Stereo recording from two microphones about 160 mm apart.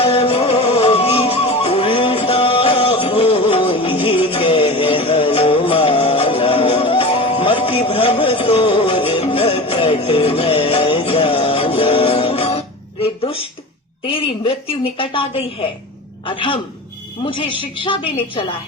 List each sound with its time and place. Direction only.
0.0 s music: 35° left (ahead or behind)
14.1 s a woman's voice: 35° left (ahead or behind)